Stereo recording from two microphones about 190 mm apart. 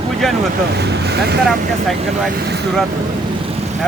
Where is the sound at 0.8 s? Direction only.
60° right (ahead or behind).